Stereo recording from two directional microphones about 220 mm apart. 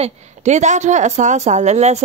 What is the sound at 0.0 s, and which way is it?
Speech, 30° right (ahead or behind).